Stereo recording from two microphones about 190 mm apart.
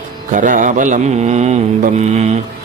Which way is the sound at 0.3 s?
45° right (ahead or behind).